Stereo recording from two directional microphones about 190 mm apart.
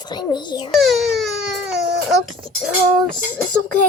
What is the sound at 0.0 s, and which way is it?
Speech, 20° left (ahead or behind).